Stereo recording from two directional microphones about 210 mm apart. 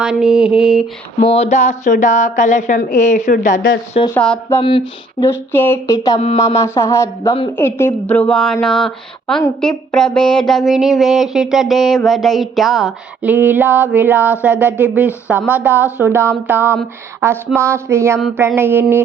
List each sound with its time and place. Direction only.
0.0 s a sound: 5° right (ahead or behind)
1.2 s a woman's voice: 30° left (ahead or behind)
4.1 s a woman's voice: 10° left (ahead or behind)
6.1 s speech: 30° left (ahead or behind)
6.6 s a woman's voice: 15° left (ahead or behind)
8.6 s a sound: 5° left (ahead or behind)
13.9 s speech: 10° right (ahead or behind)